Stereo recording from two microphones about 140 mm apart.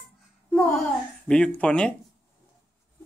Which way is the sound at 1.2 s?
10° left (ahead or behind).